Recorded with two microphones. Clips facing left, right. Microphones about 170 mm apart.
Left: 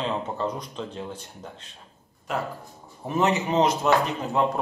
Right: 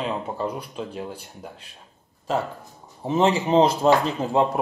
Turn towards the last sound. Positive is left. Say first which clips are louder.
# right 3 dB
turn(degrees=-30)  # may be behind; listen again after turning